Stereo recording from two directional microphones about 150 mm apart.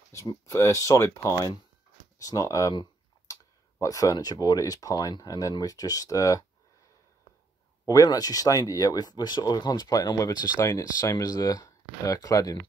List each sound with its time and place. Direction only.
0.1 s speech: 20° left (ahead or behind)
2.2 s a sound: 20° left (ahead or behind)
3.8 s speech: 25° left (ahead or behind)
7.8 s speech: 25° left (ahead or behind)